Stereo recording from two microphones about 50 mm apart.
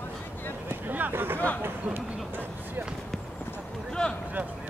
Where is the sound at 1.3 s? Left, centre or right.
Left.